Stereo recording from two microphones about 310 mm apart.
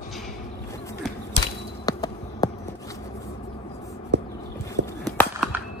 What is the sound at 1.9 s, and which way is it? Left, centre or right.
Basketball bounce, centre.